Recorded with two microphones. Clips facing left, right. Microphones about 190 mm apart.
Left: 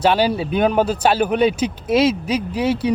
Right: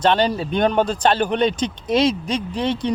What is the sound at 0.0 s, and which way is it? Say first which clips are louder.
Speech: left 1 dB; 10° left (ahead or behind).